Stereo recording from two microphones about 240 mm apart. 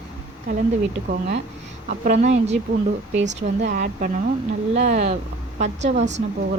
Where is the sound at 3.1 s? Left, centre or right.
Right.